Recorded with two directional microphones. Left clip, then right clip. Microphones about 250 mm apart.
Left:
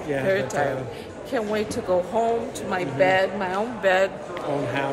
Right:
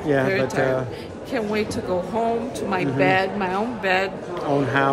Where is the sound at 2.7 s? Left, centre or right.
Centre.